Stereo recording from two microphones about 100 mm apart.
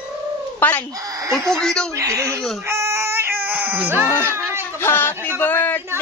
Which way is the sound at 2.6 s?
30° right (ahead or behind).